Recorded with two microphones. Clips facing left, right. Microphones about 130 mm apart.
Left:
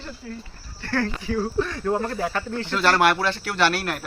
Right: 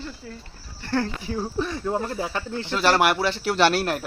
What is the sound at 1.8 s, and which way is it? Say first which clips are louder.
Speech: left 2 dB; 10° right (ahead or behind).